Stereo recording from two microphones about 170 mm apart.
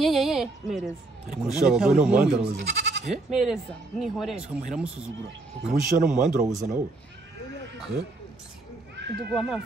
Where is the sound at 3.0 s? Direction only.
Centre (ahead or behind).